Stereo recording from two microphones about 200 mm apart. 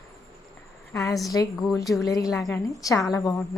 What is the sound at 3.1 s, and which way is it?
Speech, 15° left (ahead or behind).